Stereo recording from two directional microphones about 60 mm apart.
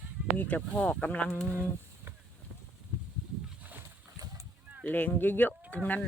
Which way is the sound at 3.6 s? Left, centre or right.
Right.